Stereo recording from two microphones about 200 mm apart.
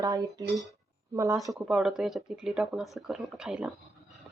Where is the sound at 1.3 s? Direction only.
Centre (ahead or behind).